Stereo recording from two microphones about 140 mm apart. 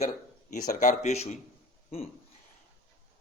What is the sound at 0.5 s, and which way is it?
Speech, 60° left (ahead or behind).